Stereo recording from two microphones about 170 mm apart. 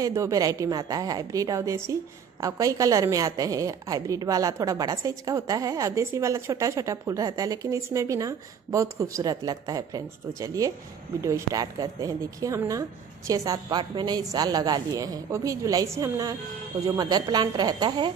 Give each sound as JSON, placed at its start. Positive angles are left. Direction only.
{"t": 0.0, "sound": "a woman's voice", "side_deg": -20}